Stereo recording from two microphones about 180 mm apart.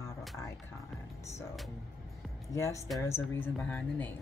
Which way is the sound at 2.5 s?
15° left (ahead or behind).